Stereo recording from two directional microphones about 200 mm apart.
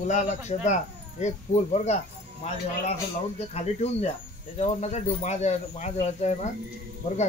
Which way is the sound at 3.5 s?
30° left (ahead or behind).